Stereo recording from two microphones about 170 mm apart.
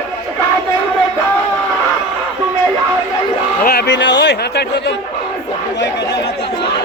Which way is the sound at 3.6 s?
80° left.